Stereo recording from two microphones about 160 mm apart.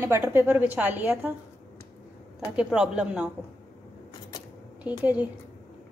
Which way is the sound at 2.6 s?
5° right (ahead or behind).